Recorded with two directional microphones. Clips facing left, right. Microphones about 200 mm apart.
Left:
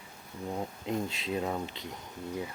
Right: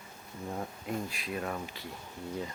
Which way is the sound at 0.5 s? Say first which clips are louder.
Left 3 dB; 20° left (ahead or behind).